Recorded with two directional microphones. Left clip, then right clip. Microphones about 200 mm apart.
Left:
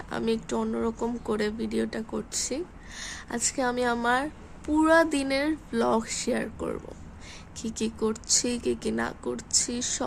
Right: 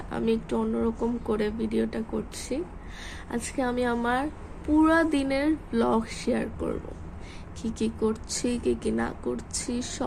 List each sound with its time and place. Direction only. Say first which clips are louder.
0.1 s a woman's voice: right 1 dB; 30° left (ahead or behind)